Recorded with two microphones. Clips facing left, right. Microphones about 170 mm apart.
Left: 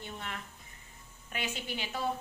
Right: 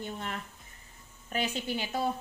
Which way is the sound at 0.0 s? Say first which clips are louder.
Right 5 dB; 40° right (ahead or behind).